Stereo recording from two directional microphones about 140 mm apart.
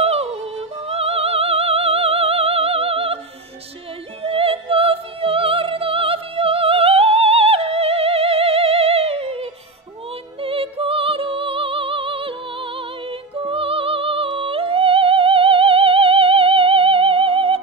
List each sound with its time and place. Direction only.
0.0 s music: 45° right (ahead or behind)
4.2 s music: 45° right (ahead or behind)